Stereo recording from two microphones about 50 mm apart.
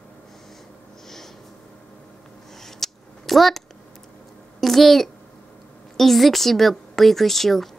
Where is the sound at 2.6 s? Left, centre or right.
Centre.